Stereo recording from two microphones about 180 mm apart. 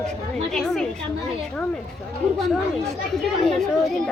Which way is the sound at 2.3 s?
Centre (ahead or behind).